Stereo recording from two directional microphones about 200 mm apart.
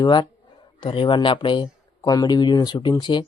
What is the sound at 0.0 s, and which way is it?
Speech, 20° left (ahead or behind).